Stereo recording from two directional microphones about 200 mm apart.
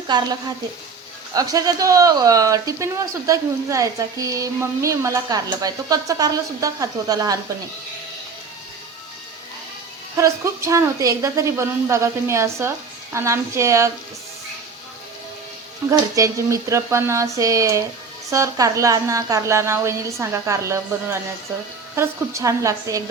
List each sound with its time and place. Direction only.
0.1 s speech: 20° right (ahead or behind)
1.3 s speech: 15° right (ahead or behind)
10.2 s speech: 15° right (ahead or behind)
15.9 s speech: 15° right (ahead or behind)